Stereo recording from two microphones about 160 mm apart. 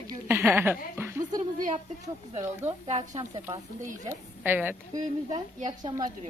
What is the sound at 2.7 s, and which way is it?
Speech, 40° right (ahead or behind).